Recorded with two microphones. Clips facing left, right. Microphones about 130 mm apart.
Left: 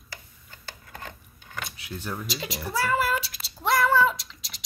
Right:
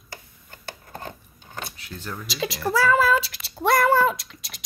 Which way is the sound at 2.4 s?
90° right.